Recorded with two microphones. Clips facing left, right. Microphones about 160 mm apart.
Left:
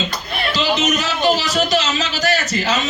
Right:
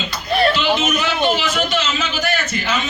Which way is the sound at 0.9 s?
35° left (ahead or behind).